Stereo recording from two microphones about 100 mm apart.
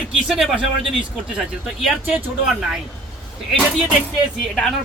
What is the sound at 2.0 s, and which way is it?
Speech, 15° right (ahead or behind).